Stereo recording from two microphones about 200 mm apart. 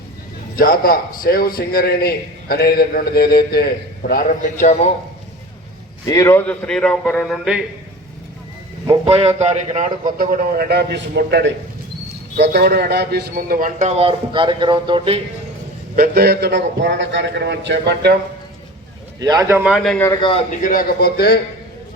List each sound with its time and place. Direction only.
0.5 s a man's voice: 45° left (ahead or behind)
6.1 s a man's voice: 15° left (ahead or behind); by 7.6 s 5° right (ahead or behind)
8.9 s a man's voice: 30° right (ahead or behind)
10.2 s a man's voice: 45° right (ahead or behind); by 15.2 s 25° right (ahead or behind)
16.0 s a man's voice: 50° right (ahead or behind)
19.2 s a man's voice: 20° right (ahead or behind); by 20.1 s centre (ahead or behind)
20.1 s a man's voice: 25° left (ahead or behind)
20.5 s a man's voice: 40° left (ahead or behind)